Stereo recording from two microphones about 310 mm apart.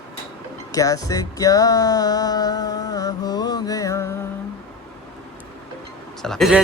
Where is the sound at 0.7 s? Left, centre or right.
Centre.